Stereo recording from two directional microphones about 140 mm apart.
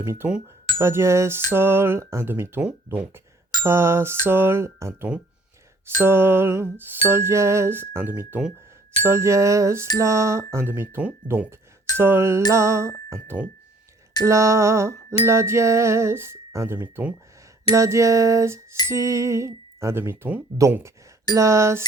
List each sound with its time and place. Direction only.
0.0 s music: 15° right (ahead or behind)
0.8 s speech: 20° right (ahead or behind)
1.5 s music: 15° right (ahead or behind)
8.3 s speech: 5° right (ahead or behind)
9.0 s speech: 20° right (ahead or behind)
10.0 s music: 20° right (ahead or behind)
12.5 s speech: 20° right (ahead or behind)
13.2 s music: 10° right (ahead or behind)
14.3 s speech: 20° right (ahead or behind)